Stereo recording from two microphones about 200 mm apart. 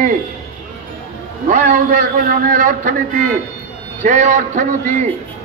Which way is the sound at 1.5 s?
40° right (ahead or behind).